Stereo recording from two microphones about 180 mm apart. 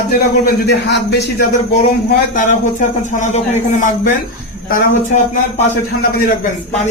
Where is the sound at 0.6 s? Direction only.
70° left (ahead or behind).